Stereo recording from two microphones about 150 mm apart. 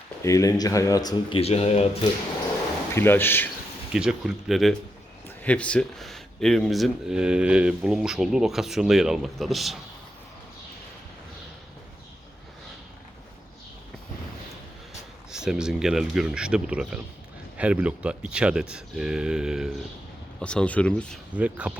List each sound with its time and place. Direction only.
0.2 s speech: 20° left (ahead or behind)
1.4 s speech: 45° left (ahead or behind)
2.9 s speech: 15° left (ahead or behind)
3.9 s speech: 5° right (ahead or behind)
15.3 s speech: 5° right (ahead or behind)
20.4 s speech: 5° left (ahead or behind)
21.3 s speech: 10° right (ahead or behind)